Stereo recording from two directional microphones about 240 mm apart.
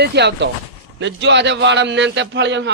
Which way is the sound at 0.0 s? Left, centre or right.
Right.